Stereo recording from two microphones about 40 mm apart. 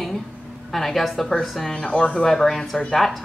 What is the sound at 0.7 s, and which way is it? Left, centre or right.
Speech, centre.